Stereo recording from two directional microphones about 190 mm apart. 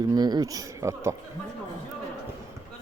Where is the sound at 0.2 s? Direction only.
20° right (ahead or behind).